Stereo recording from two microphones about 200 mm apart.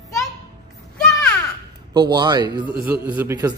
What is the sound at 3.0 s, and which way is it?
Speech, 10° right (ahead or behind).